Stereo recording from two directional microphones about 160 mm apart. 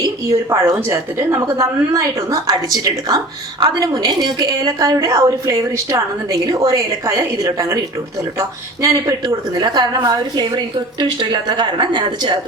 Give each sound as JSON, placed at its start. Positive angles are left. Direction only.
{"t": 0.0, "sound": "a woman's voice", "side_deg": -20}